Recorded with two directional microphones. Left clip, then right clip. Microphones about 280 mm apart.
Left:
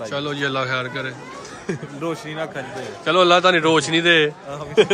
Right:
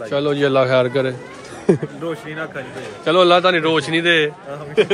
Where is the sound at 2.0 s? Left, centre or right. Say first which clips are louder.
Left 2 dB; left.